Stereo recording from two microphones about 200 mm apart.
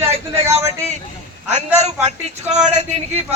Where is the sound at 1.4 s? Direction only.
35° right (ahead or behind).